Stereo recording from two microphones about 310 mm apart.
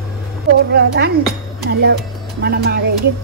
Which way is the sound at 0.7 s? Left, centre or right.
Right.